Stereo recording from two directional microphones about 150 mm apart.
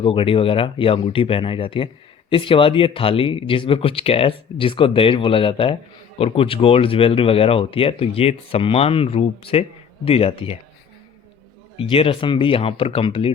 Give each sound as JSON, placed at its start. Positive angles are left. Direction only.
{"t": 0.0, "sound": "speech", "side_deg": 35}
{"t": 11.8, "sound": "speech", "side_deg": 40}